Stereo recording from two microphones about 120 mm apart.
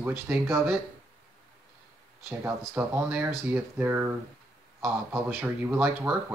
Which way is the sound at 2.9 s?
20° right (ahead or behind).